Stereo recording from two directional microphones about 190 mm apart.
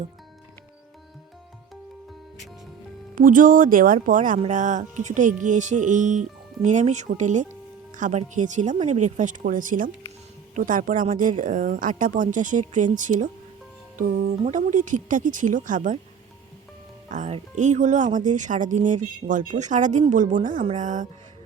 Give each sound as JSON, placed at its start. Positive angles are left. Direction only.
{"t": 3.2, "sound": "speech", "side_deg": -45}
{"t": 17.1, "sound": "speech", "side_deg": -35}